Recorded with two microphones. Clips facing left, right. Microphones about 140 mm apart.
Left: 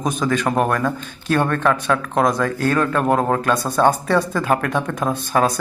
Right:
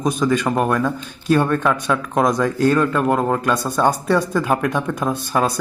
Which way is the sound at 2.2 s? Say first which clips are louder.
Right 4 dB; 15° right (ahead or behind).